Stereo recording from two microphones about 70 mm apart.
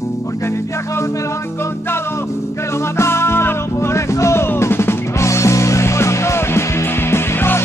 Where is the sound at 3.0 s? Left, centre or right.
Left.